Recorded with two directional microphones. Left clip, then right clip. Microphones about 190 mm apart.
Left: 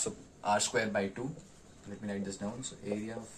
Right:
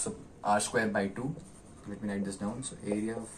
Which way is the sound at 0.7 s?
25° left (ahead or behind).